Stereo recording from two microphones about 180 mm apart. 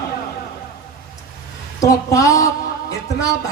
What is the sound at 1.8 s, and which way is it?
Speech, 20° left (ahead or behind).